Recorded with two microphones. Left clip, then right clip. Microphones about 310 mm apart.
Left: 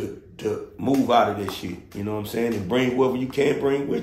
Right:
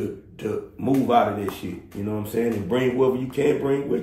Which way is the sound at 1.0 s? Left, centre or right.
Centre.